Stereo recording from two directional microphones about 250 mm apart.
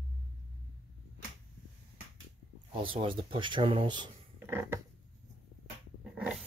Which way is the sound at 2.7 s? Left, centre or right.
Right.